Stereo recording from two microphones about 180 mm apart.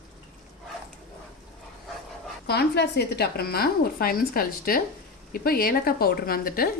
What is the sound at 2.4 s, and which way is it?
Speech, 65° left (ahead or behind).